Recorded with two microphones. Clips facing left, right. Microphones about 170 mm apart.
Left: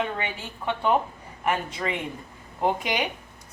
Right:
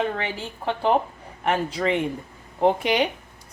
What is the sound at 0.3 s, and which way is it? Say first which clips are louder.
A woman's voice: right 2 dB; 30° right (ahead or behind).